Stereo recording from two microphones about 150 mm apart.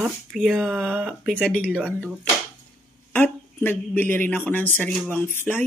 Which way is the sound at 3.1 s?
15° left (ahead or behind).